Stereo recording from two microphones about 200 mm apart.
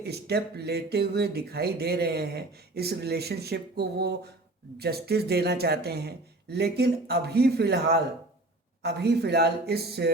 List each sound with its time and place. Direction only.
0.0 s speech: 55° right (ahead or behind)